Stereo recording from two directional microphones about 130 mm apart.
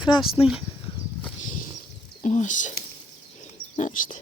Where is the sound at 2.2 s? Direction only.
70° left (ahead or behind).